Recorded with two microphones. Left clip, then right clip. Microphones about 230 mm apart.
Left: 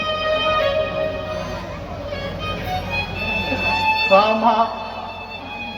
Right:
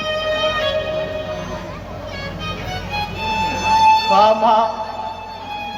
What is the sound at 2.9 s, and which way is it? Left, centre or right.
Music, right.